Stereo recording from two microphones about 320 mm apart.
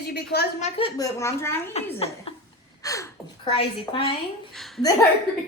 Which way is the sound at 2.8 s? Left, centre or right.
Centre.